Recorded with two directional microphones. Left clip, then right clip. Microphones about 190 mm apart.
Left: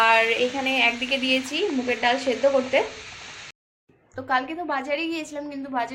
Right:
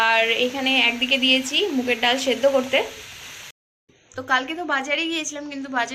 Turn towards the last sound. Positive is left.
turn(degrees=5)  # may be behind; listen again after turning